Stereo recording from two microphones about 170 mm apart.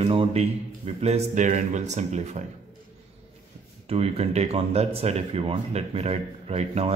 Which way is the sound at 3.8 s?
35° right (ahead or behind).